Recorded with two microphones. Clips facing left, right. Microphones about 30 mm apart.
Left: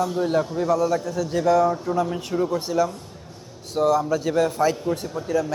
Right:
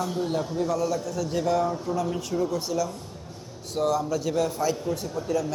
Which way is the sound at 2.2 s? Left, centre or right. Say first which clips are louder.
Left 3 dB; left.